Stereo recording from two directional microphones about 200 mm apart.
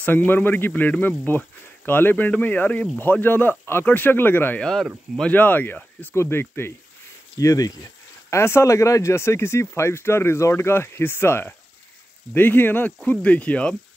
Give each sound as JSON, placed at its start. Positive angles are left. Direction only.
{"t": 0.0, "sound": "speech", "side_deg": 10}